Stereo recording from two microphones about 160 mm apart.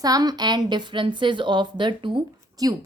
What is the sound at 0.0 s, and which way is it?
A woman's voice, 25° right (ahead or behind).